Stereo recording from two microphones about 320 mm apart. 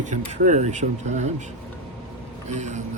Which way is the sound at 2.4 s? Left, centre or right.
Right.